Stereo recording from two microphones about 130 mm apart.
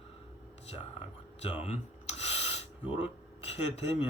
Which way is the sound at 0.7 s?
50° left (ahead or behind).